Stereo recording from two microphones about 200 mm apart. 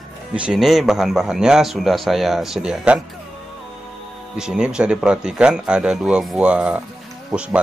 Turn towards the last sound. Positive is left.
turn(degrees=-5)  # may be behind; listen again after turning